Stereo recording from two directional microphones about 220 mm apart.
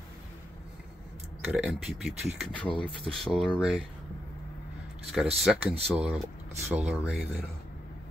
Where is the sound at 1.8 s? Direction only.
Centre (ahead or behind).